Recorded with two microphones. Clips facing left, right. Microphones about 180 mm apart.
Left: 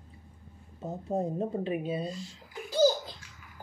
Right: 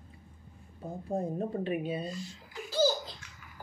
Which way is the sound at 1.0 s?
20° left (ahead or behind).